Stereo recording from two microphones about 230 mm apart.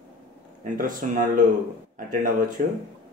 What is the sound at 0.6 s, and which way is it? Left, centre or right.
Speech, right.